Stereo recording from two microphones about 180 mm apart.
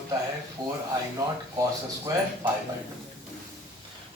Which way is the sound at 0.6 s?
25° right (ahead or behind).